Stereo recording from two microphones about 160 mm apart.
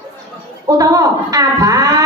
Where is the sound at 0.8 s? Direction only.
20° right (ahead or behind).